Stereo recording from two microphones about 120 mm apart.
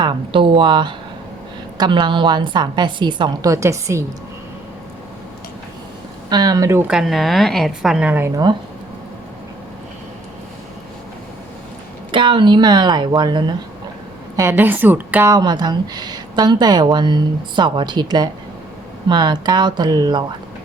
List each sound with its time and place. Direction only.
0.0 s speech: 45° right (ahead or behind)
3.5 s a woman's voice: 25° right (ahead or behind)
6.3 s speech: 35° right (ahead or behind)
6.8 s a woman's voice: centre (ahead or behind)
12.1 s speech: 45° right (ahead or behind)
14.3 s a woman's voice: 20° right (ahead or behind)
15.3 s speech: 35° right (ahead or behind)